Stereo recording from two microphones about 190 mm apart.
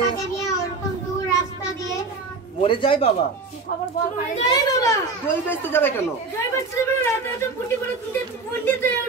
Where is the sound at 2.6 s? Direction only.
30° left (ahead or behind).